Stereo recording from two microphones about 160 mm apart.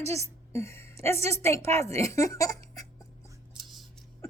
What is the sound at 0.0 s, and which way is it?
A woman's voice, 15° left (ahead or behind).